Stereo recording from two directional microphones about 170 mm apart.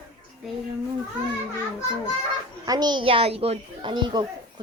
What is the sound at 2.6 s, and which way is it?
A child's voice, 25° right (ahead or behind).